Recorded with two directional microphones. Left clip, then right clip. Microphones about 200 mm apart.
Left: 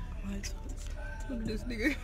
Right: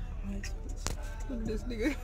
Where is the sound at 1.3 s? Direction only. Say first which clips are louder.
Right 2 dB; 20° left (ahead or behind).